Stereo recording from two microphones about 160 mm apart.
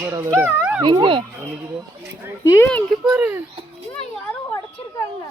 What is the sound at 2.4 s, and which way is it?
Speech, 20° left (ahead or behind).